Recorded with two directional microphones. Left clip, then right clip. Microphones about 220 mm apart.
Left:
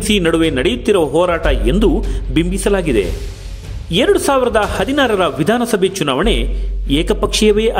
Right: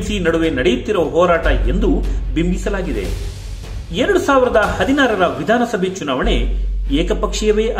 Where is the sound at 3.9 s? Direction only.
50° left (ahead or behind).